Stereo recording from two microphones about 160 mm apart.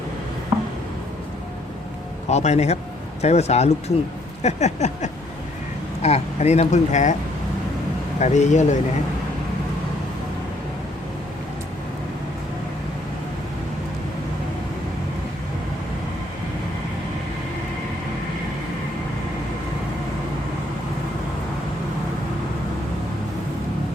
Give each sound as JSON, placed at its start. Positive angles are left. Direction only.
{"t": 0.5, "sound": "a sound", "side_deg": -15}
{"t": 2.3, "sound": "speech", "side_deg": 45}
{"t": 8.2, "sound": "speech", "side_deg": 45}